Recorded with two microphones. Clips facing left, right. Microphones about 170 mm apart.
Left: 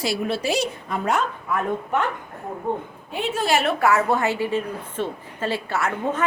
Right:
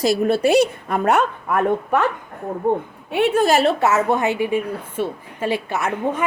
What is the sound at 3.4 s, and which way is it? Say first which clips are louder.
Speech: right 3 dB; 40° right (ahead or behind).